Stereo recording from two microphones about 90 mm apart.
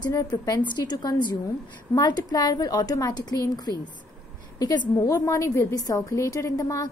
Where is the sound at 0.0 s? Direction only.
45° left (ahead or behind).